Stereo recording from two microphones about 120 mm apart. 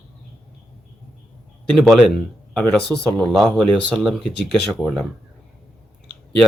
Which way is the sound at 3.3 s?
Centre (ahead or behind).